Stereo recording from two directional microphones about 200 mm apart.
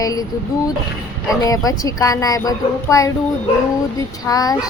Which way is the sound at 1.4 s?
15° left (ahead or behind).